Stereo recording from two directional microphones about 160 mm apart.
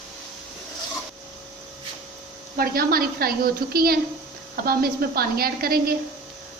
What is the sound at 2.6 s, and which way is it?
A woman's voice, 70° right (ahead or behind).